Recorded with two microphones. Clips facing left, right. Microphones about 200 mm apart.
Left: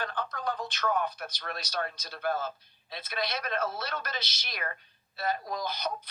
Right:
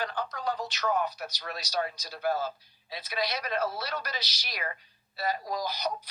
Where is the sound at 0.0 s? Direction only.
55° left (ahead or behind).